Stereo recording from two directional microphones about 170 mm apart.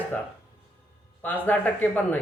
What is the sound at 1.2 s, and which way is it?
Speech, 10° left (ahead or behind).